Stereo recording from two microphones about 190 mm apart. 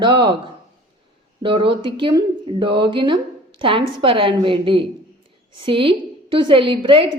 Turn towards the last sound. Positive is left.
turn(degrees=-25)  # may be behind; listen again after turning